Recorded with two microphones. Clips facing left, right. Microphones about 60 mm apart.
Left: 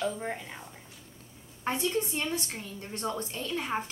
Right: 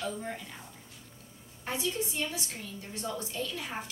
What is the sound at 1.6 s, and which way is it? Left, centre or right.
A woman's voice, left.